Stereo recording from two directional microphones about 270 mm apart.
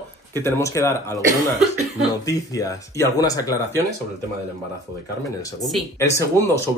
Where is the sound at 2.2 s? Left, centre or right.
Centre.